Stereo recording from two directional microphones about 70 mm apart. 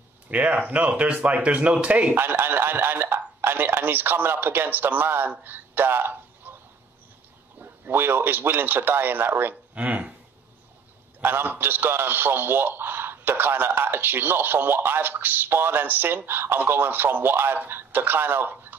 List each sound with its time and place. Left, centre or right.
0.3 s a man's voice: centre
2.1 s a man's voice: right
5.4 s a sound: right
7.9 s a man's voice: right
11.1 s a man's voice: right